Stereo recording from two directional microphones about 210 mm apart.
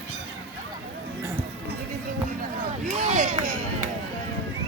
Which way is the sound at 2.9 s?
35° right (ahead or behind).